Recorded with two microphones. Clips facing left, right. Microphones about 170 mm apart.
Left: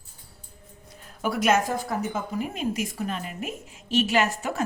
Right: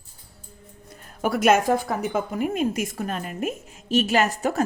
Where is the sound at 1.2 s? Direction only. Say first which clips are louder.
Right 4 dB; 50° right (ahead or behind).